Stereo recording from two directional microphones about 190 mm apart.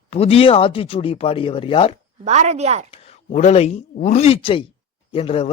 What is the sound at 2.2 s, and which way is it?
Speech, 35° right (ahead or behind).